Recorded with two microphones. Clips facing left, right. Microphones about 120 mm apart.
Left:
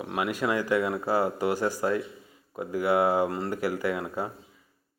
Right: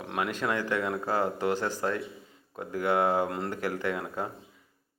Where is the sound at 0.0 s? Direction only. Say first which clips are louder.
Left 2 dB; 5° left (ahead or behind).